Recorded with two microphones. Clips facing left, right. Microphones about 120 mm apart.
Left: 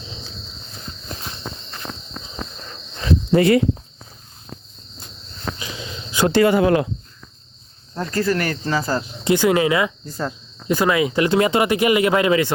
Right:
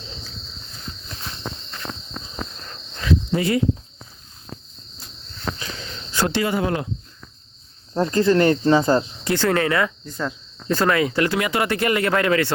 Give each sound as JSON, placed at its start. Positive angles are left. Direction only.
{"t": 3.3, "sound": "speech", "side_deg": 70}
{"t": 5.5, "sound": "cricket", "side_deg": 10}
{"t": 6.3, "sound": "speech", "side_deg": 70}
{"t": 7.9, "sound": "speech", "side_deg": -25}
{"t": 9.2, "sound": "speech", "side_deg": 15}
{"t": 11.3, "sound": "speech", "side_deg": 30}
{"t": 11.6, "sound": "speech", "side_deg": 15}